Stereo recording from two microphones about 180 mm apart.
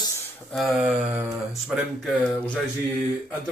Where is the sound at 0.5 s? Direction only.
Centre (ahead or behind).